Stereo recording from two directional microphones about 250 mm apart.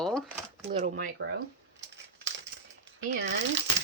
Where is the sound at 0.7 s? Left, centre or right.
Right.